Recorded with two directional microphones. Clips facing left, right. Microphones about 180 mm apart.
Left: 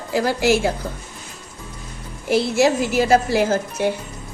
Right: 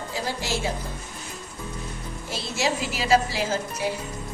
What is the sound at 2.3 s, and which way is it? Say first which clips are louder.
A woman's voice: left 11 dB; 60° left (ahead or behind).